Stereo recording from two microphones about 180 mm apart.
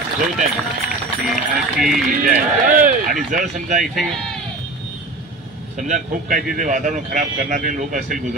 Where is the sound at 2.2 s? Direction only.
45° right (ahead or behind).